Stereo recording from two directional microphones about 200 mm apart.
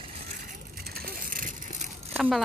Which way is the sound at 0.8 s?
50° right (ahead or behind).